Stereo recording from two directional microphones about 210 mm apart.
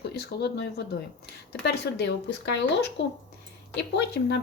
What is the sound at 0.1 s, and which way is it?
Speech, 50° left (ahead or behind).